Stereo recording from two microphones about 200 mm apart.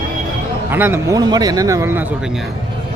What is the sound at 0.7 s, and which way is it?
A man's voice, 10° right (ahead or behind).